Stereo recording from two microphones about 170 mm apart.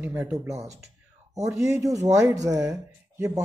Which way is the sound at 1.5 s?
20° right (ahead or behind).